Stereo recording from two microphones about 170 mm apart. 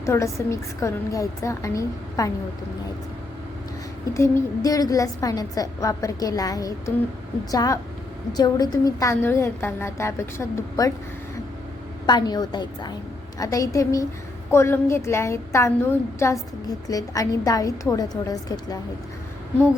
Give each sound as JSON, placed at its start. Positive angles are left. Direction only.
{"t": 0.0, "sound": "a woman's voice", "side_deg": 15}
{"t": 4.1, "sound": "a woman's voice", "side_deg": 15}
{"t": 12.0, "sound": "a woman's voice", "side_deg": 25}